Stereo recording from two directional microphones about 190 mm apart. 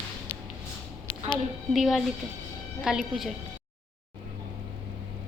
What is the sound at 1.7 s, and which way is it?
A woman's voice, centre (ahead or behind).